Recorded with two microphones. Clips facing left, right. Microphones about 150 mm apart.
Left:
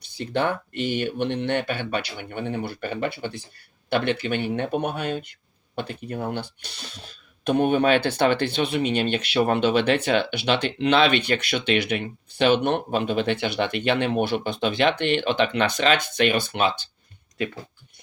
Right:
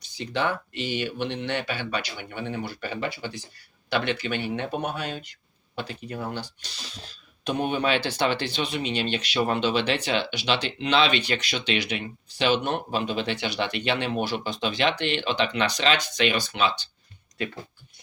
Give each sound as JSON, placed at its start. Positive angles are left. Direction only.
{"t": 0.0, "sound": "speech", "side_deg": 55}